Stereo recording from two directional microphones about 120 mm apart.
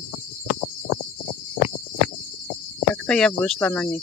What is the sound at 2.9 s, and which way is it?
Speech, 10° left (ahead or behind).